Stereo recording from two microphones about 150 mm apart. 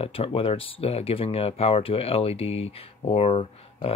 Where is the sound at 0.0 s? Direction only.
40° left (ahead or behind).